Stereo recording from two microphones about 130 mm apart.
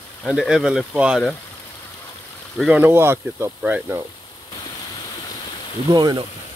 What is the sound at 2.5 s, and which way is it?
Speech, 5° right (ahead or behind).